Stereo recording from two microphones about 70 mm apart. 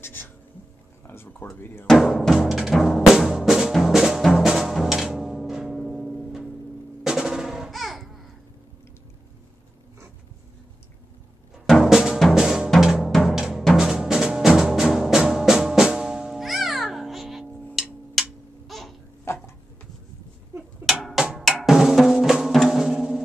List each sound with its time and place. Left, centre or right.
0.0 s speech: left
1.0 s a sound: left
2.0 s music: centre
7.0 s drum: centre
11.6 s music: centre
12.7 s drum: centre
13.7 s music: centre
17.8 s a sound: centre
18.7 s baby cry: centre
19.2 s a sound: left
20.9 s percussion: centre
21.4 s drum: centre